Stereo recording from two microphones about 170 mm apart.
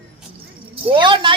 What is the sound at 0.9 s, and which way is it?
Speech, 30° right (ahead or behind).